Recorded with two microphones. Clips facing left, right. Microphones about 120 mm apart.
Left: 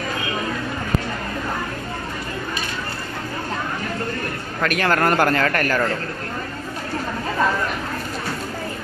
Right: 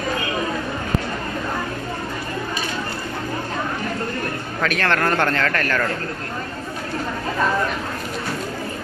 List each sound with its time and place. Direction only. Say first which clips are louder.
4.6 s a man's voice: left 2 dB; 5° left (ahead or behind)